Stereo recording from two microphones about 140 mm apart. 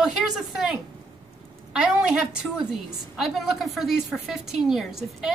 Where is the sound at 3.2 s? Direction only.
Centre (ahead or behind).